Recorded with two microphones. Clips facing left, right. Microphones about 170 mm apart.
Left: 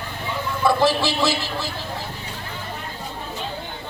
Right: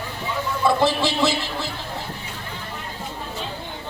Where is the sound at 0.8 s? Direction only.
20° right (ahead or behind).